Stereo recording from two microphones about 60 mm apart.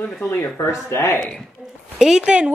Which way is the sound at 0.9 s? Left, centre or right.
Left.